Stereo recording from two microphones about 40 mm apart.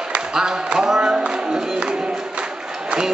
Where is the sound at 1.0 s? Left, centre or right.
Right.